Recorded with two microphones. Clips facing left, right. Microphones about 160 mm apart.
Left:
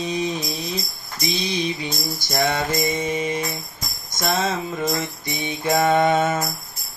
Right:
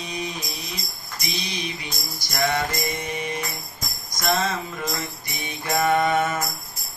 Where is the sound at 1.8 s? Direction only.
25° left (ahead or behind).